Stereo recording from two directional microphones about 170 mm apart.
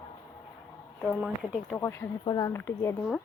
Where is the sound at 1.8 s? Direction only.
15° left (ahead or behind).